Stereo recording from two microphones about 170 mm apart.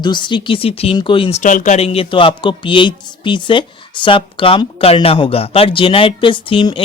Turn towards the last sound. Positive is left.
turn(degrees=30)  # may be behind; listen again after turning